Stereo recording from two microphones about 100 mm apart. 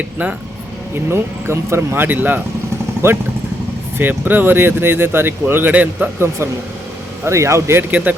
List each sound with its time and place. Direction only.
0.9 s speech: 25° right (ahead or behind)